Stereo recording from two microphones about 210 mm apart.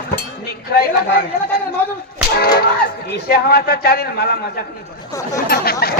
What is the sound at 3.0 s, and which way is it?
A man's voice, 45° left (ahead or behind).